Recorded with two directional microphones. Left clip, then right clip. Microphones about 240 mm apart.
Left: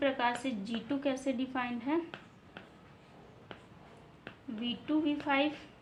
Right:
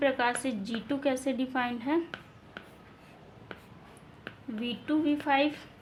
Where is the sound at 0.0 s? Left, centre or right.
Right.